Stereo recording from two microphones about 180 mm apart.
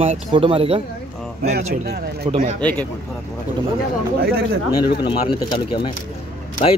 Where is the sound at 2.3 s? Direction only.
35° right (ahead or behind).